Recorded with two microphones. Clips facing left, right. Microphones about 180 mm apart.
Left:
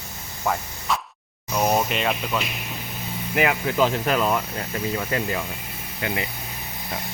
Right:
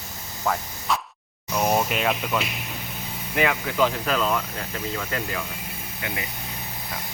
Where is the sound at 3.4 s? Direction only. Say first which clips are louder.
Left 1 dB; 20° left (ahead or behind).